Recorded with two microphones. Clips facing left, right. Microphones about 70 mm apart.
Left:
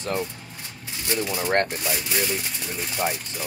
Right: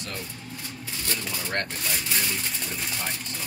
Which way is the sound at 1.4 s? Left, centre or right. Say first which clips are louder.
Left 9 dB; left.